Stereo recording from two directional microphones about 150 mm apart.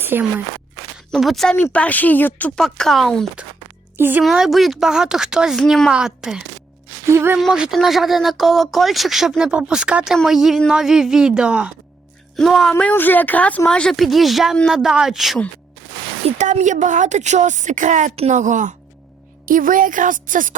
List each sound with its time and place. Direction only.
0.0 s speech: 15° right (ahead or behind)
0.9 s speech: centre (ahead or behind)
3.9 s a woman's voice: 15° right (ahead or behind)
4.2 s speech: centre (ahead or behind)
7.1 s speech: 15° right (ahead or behind)
7.3 s speech: 5° right (ahead or behind)
12.7 s speech: 15° left (ahead or behind)
16.2 s a woman's voice: 50° right (ahead or behind)
19.5 s speech: 65° right (ahead or behind)